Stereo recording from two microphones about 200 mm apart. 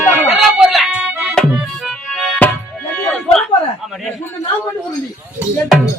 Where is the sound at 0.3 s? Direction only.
Centre (ahead or behind).